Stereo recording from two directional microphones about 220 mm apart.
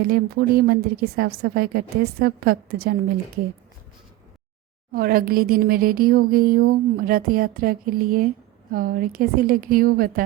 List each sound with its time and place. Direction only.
0.0 s a woman's voice: 45° right (ahead or behind)
4.9 s speech: 40° right (ahead or behind)